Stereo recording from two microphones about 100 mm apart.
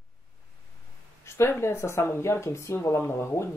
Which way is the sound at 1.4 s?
25° left (ahead or behind).